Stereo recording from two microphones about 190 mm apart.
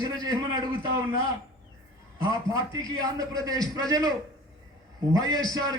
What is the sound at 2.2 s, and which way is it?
A man's voice, 20° right (ahead or behind).